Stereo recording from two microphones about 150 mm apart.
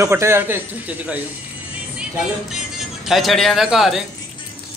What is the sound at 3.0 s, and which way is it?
Speech, centre (ahead or behind).